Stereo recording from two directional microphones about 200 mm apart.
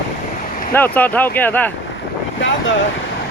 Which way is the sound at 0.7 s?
10° left (ahead or behind).